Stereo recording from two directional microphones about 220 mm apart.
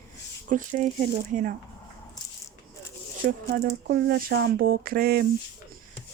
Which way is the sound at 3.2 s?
45° right (ahead or behind).